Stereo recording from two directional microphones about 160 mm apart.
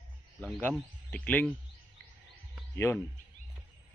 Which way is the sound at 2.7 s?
15° left (ahead or behind).